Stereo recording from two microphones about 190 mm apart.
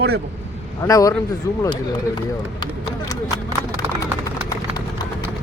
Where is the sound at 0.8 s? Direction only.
15° left (ahead or behind).